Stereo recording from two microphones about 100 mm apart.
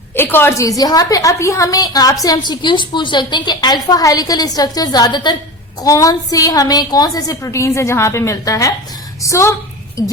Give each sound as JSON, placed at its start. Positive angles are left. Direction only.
{"t": 0.2, "sound": "a woman's voice", "side_deg": 20}
{"t": 0.8, "sound": "a woman's voice", "side_deg": 40}
{"t": 5.8, "sound": "a woman's voice", "side_deg": 35}